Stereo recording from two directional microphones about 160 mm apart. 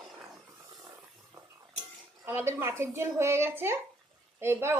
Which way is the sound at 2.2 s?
15° right (ahead or behind).